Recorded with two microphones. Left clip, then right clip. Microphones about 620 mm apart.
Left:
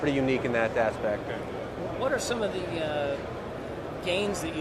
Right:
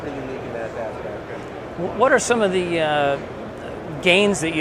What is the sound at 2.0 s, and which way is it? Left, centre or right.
Speech, right.